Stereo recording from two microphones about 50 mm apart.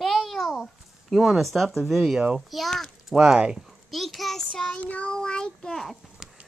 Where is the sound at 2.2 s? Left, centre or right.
Centre.